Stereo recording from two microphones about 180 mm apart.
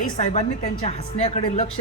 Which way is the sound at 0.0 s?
50° left (ahead or behind).